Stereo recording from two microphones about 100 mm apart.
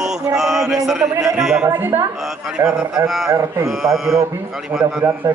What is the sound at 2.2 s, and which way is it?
A man's voice, 5° right (ahead or behind).